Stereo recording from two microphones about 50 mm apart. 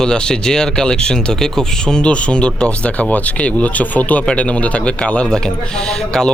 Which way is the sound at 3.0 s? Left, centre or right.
Left.